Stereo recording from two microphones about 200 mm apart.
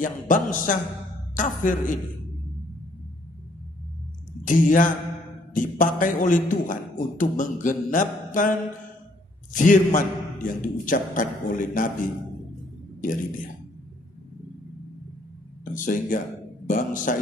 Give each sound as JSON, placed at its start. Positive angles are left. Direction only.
{"t": 0.0, "sound": "a man's voice", "side_deg": 40}
{"t": 4.5, "sound": "a man's voice", "side_deg": 40}
{"t": 15.6, "sound": "a man's voice", "side_deg": 40}